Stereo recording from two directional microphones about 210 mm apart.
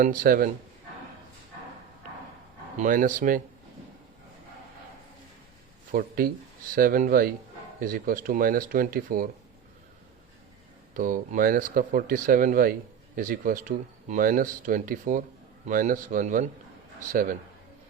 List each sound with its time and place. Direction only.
0.0 s speech: 40° right (ahead or behind)
2.7 s speech: 40° right (ahead or behind)
5.9 s speech: 45° right (ahead or behind)
10.9 s speech: 40° right (ahead or behind)